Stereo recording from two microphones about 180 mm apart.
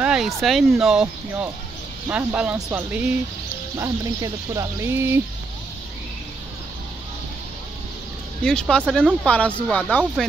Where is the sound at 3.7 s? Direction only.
20° right (ahead or behind).